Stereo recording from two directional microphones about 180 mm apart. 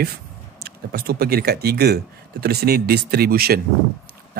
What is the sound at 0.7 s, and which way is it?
Speech, 60° right (ahead or behind).